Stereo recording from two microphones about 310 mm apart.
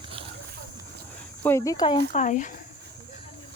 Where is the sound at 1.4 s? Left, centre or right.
Centre; by 2.6 s left.